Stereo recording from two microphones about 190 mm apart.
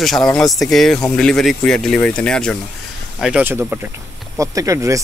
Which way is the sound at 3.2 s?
5° right (ahead or behind).